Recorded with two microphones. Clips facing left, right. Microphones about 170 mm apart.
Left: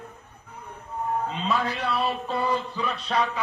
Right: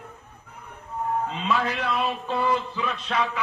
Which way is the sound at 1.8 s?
35° left (ahead or behind).